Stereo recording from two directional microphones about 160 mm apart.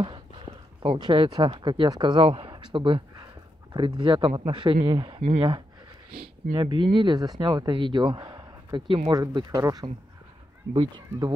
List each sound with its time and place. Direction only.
0.8 s speech: 30° right (ahead or behind)
6.1 s speech: 70° right (ahead or behind)
6.5 s speech: 30° right (ahead or behind)
9.2 s speech: 20° right (ahead or behind)